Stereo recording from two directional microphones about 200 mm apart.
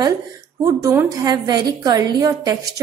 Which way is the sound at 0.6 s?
15° right (ahead or behind).